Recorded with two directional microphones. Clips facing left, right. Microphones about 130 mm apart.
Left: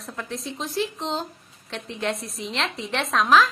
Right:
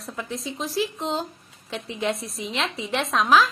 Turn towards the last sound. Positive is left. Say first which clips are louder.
# even
turn(degrees=0)  # may be behind; listen again after turning